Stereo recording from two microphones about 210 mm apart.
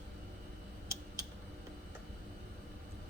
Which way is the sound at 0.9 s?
15° right (ahead or behind).